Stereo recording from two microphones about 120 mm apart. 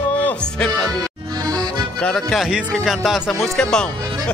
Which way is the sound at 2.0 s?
5° left (ahead or behind).